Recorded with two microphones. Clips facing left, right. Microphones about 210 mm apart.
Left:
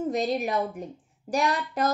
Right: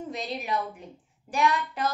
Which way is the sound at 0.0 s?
45° left (ahead or behind).